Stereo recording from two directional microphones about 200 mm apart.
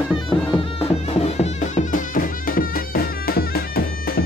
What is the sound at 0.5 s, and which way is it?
Music, 25° left (ahead or behind).